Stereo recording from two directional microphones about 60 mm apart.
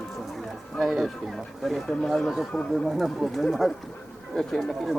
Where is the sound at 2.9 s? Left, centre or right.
Centre.